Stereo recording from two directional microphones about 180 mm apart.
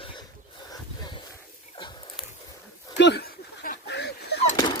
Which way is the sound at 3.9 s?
70° left (ahead or behind).